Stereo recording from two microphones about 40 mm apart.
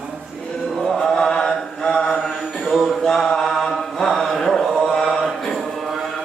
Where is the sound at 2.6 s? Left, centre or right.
Centre.